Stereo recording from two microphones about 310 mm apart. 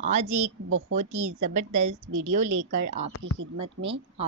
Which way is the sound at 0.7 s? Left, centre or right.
Right.